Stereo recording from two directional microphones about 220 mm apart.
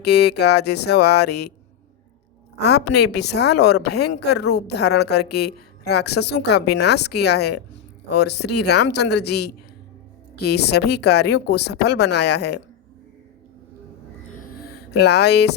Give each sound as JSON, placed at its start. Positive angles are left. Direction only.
{"t": 0.0, "sound": "speech", "side_deg": 50}
{"t": 2.6, "sound": "speech", "side_deg": 50}
{"t": 10.5, "sound": "speech", "side_deg": 50}
{"t": 14.3, "sound": "a sound", "side_deg": 40}